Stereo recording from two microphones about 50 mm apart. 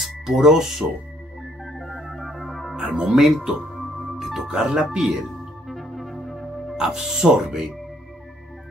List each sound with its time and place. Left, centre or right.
0.0 s speech: centre
1.6 s organ: centre
2.7 s speech: centre
5.7 s music: centre
6.8 s speech: centre